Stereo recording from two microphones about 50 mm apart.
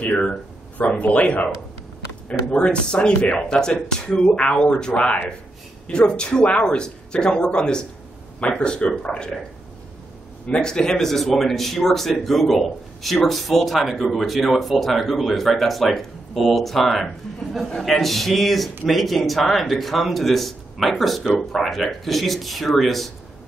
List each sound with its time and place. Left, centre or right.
0.7 s speech: left
2.5 s speech: left
10.6 s speech: centre